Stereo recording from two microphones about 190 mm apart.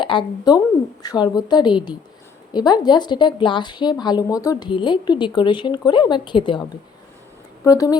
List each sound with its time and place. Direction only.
0.0 s a woman's voice: 25° left (ahead or behind)